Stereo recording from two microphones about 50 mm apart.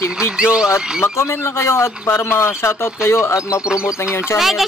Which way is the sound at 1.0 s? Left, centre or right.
Left.